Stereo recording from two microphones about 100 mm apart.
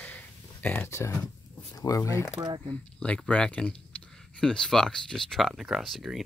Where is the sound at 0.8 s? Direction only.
30° left (ahead or behind).